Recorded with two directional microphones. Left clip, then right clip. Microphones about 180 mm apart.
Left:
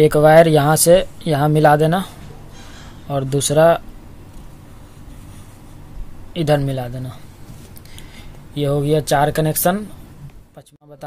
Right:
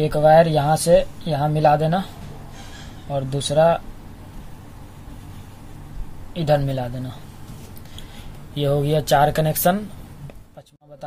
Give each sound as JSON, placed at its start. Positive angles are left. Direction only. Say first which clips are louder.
{"t": 0.0, "sound": "speech", "louder": "left 4 dB", "side_deg": 50}
{"t": 6.3, "sound": "speech", "louder": "left 2 dB", "side_deg": 40}
{"t": 8.5, "sound": "speech", "louder": "left 3 dB", "side_deg": 25}